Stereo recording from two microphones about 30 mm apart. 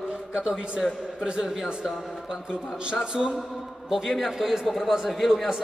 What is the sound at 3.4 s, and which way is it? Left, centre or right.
A man's voice, centre.